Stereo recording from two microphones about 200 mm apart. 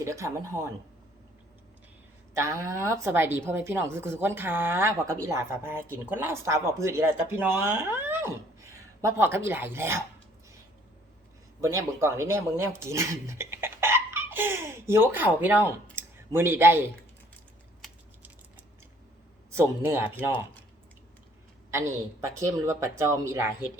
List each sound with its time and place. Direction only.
0.0 s a woman's voice: 15° right (ahead or behind)
2.3 s a woman's voice: 15° right (ahead or behind)
11.6 s speech: 15° right (ahead or behind)
19.5 s speech: 10° right (ahead or behind)
21.7 s a woman's voice: 15° right (ahead or behind)